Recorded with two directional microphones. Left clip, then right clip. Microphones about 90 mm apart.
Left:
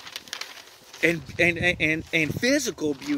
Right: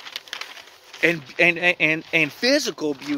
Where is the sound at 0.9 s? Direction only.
35° left (ahead or behind).